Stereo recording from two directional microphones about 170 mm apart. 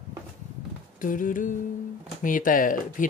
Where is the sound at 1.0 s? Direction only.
50° left (ahead or behind).